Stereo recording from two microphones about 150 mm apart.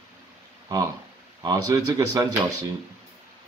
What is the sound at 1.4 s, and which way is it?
Speech, 25° right (ahead or behind).